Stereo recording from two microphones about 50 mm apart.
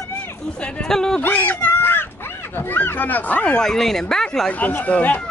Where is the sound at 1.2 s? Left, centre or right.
Left.